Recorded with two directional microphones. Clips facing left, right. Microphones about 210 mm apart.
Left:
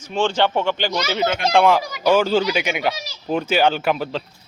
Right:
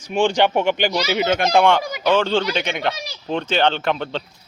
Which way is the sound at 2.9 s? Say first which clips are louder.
Right 1 dB; 60° right (ahead or behind).